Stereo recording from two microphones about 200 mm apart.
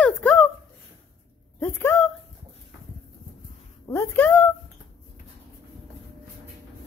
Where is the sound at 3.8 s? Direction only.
15° left (ahead or behind).